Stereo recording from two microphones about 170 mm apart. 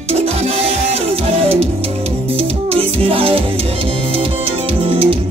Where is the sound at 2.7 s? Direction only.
35° right (ahead or behind).